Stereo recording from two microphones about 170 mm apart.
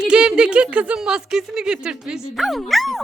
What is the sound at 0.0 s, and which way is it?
A woman's voice, 5° right (ahead or behind).